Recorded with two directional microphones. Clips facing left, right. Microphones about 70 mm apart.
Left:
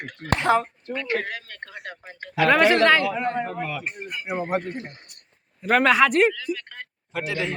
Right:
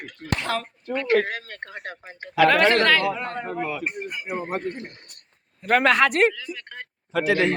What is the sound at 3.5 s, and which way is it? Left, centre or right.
Speech, centre.